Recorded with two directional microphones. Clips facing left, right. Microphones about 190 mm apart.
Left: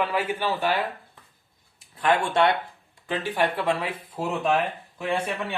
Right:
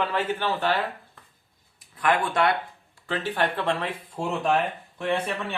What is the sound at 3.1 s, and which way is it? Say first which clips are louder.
Speech: left 1 dB; 10° left (ahead or behind).